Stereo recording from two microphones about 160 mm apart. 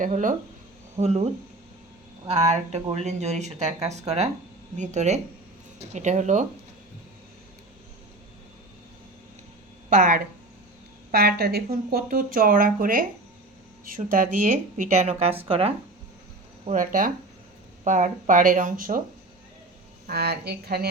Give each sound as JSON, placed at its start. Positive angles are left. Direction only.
{"t": 0.0, "sound": "speech", "side_deg": -55}
{"t": 0.9, "sound": "speech", "side_deg": -45}
{"t": 9.9, "sound": "speech", "side_deg": -60}
{"t": 11.1, "sound": "speech", "side_deg": -80}
{"t": 14.1, "sound": "speech", "side_deg": -55}
{"t": 16.6, "sound": "speech", "side_deg": -55}
{"t": 20.1, "sound": "speech", "side_deg": -75}